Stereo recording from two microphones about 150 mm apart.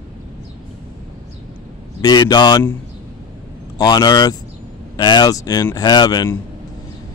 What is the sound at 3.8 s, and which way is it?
Speech, 25° left (ahead or behind).